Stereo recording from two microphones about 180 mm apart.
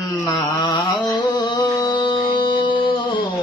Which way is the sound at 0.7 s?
25° left (ahead or behind).